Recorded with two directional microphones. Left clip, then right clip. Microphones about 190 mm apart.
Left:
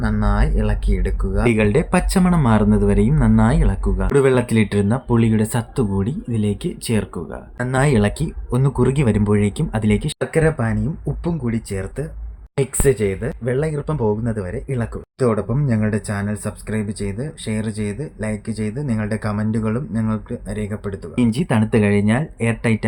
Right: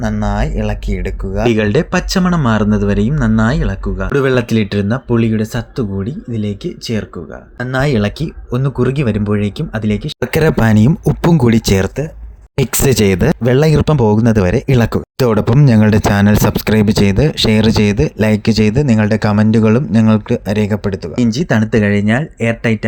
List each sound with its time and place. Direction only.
0.0 s speech: 10° right (ahead or behind)
10.3 s speech: 55° right (ahead or behind); by 21.0 s 35° right (ahead or behind)
21.2 s speech: 15° right (ahead or behind)